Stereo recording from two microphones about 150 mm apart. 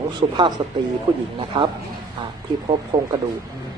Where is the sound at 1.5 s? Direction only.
30° right (ahead or behind).